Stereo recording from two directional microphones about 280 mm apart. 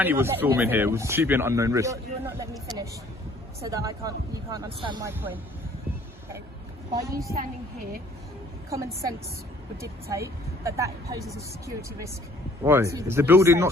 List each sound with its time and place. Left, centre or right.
0.0 s speech: centre
3.6 s speech: centre
6.9 s speech: centre
7.3 s a woman's voice: right
8.7 s speech: centre